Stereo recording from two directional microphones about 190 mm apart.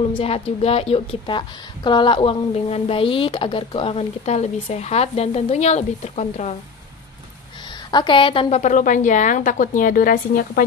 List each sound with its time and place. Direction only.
0.1 s a woman's voice: 30° left (ahead or behind)
7.9 s a woman's voice: 25° left (ahead or behind); by 10.6 s 50° left (ahead or behind)